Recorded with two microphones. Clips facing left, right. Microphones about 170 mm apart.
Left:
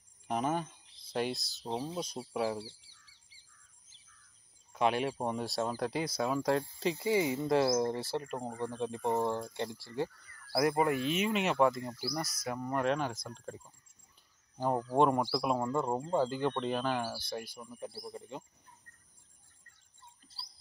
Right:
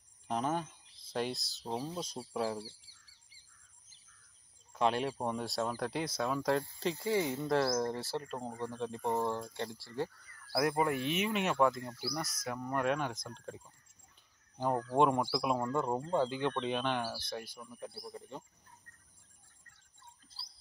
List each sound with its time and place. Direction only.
0.3 s speech: 10° left (ahead or behind)
1.9 s speech: 15° left (ahead or behind)
4.7 s speech: 10° left (ahead or behind)
10.5 s speech: 5° left (ahead or behind)